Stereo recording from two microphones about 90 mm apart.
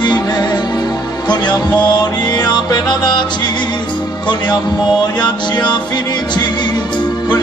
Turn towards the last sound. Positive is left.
turn(degrees=55)  # may be behind; listen again after turning